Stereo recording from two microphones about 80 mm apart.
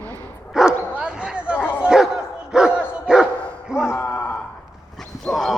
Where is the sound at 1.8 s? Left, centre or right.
Centre.